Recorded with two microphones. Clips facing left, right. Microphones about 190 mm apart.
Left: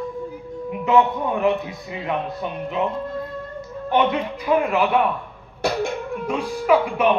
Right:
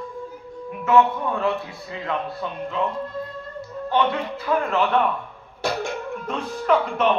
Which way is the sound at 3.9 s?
15° left (ahead or behind).